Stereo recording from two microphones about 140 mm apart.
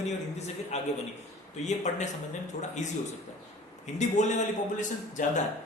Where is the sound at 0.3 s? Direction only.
50° left (ahead or behind).